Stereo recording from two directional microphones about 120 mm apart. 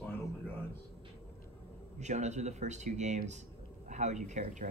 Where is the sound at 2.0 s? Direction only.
75° right (ahead or behind).